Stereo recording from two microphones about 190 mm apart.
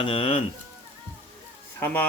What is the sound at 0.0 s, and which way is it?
Speech, 30° left (ahead or behind).